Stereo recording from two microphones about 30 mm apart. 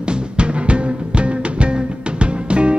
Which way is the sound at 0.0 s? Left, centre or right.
Right.